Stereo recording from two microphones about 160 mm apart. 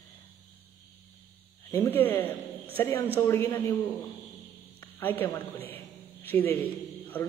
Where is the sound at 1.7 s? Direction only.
10° left (ahead or behind).